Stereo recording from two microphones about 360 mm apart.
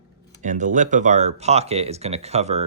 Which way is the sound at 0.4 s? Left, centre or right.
Right.